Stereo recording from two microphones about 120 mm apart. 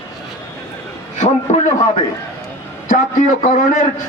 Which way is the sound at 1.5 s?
70° left (ahead or behind).